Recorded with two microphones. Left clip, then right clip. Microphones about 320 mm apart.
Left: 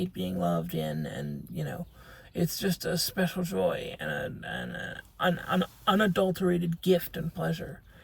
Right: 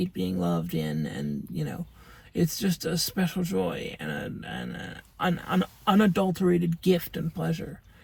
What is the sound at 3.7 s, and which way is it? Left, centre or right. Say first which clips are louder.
Speech: left 2 dB; right.